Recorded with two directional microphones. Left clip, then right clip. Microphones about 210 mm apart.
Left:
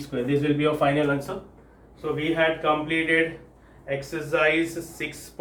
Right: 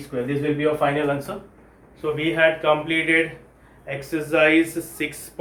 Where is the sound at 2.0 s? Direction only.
45° right (ahead or behind).